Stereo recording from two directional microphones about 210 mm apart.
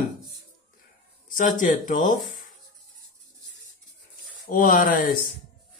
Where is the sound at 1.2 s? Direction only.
40° left (ahead or behind).